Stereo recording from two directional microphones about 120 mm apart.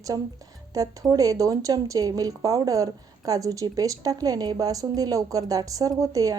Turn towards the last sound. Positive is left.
turn(degrees=-30)  # may be behind; listen again after turning